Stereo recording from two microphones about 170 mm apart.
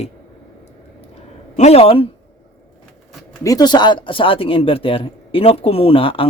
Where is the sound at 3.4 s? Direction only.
25° left (ahead or behind).